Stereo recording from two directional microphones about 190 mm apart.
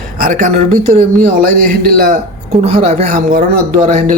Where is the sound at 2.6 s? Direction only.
35° right (ahead or behind).